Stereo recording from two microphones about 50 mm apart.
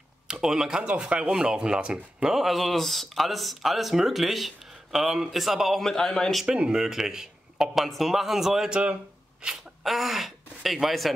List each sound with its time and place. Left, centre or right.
0.3 s speech: centre
2.4 s speech: centre
5.8 s a man's voice: centre
6.4 s speech: centre
7.7 s speech: centre
8.6 s speech: centre
9.8 s speech: centre